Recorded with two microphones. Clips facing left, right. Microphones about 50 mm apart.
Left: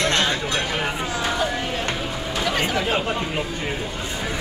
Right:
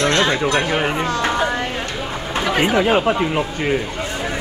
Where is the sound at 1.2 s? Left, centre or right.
Right.